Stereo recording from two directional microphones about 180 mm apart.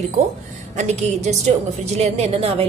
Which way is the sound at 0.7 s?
40° right (ahead or behind).